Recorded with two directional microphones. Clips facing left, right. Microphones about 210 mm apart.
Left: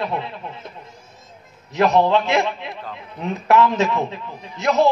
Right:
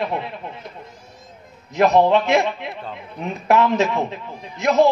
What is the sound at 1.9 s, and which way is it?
A man's voice, 20° right (ahead or behind).